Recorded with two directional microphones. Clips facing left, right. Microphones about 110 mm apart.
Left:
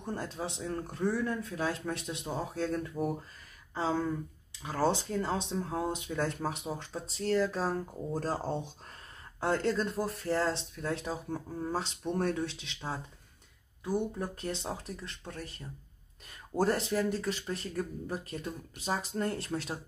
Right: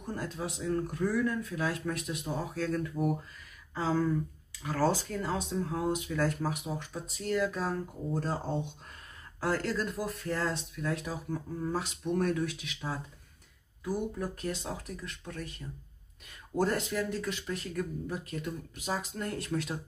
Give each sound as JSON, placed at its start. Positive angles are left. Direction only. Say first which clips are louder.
{"t": 0.0, "sound": "speech", "louder": "even", "side_deg": 30}
{"t": 9.4, "sound": "speech", "louder": "left 2 dB", "side_deg": 25}
{"t": 14.1, "sound": "speech", "louder": "right 1 dB", "side_deg": 30}
{"t": 16.5, "sound": "speech", "louder": "left 1 dB", "side_deg": 35}